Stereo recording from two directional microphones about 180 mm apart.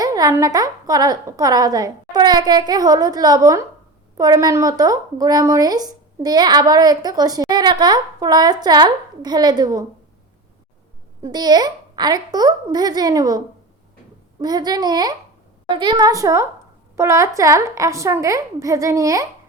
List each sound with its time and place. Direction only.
0.0 s speech: 20° right (ahead or behind)
11.2 s a woman's voice: 25° right (ahead or behind)